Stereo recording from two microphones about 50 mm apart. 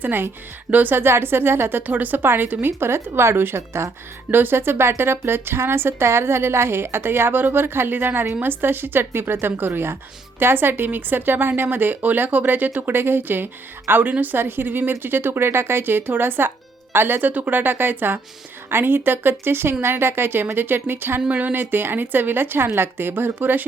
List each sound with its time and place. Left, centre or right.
0.0 s a woman's voice: right
0.7 s a woman's voice: right
0.9 s a woman's voice: right
1.9 s a woman's voice: right
2.7 s speech: right
4.3 s a woman's voice: right
21.2 s a woman's voice: right